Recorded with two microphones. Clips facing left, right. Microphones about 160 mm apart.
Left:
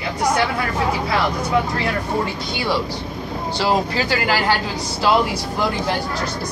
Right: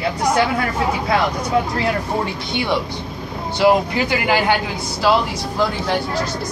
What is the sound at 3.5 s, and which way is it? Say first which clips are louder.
Speech: right 5 dB; 15° right (ahead or behind).